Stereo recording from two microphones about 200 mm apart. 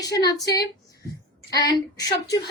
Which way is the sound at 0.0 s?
20° left (ahead or behind).